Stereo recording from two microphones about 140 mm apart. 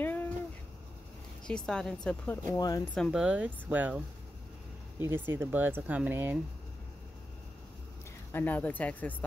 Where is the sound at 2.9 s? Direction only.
5° left (ahead or behind).